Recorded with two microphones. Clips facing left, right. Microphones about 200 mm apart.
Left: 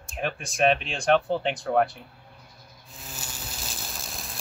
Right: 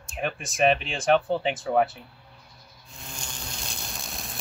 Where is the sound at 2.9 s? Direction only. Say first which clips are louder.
Even; 5° left (ahead or behind).